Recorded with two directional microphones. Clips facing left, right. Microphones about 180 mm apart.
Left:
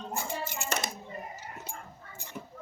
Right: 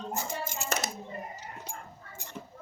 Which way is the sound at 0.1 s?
45° right (ahead or behind).